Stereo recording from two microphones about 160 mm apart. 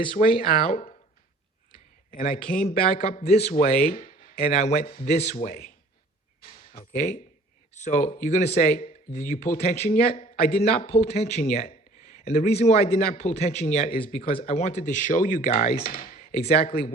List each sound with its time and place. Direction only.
0.1 s speech: 60° left (ahead or behind)
1.7 s a sound: 65° left (ahead or behind)
2.6 s speech: 40° left (ahead or behind); by 4.4 s 55° left (ahead or behind)
4.4 s speech: 40° left (ahead or behind); by 5.7 s 65° left (ahead or behind)
6.4 s a sound: 60° left (ahead or behind)
7.8 s speech: 50° left (ahead or behind)
10.4 s speech: 70° left (ahead or behind)
10.9 s speech: 40° left (ahead or behind)